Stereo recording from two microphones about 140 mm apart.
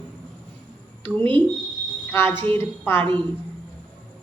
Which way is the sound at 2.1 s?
15° left (ahead or behind).